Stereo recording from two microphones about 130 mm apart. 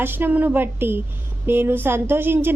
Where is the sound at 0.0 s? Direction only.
15° right (ahead or behind).